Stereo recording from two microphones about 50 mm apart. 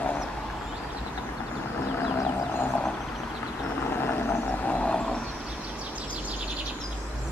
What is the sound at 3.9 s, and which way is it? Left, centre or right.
Vehicle, left.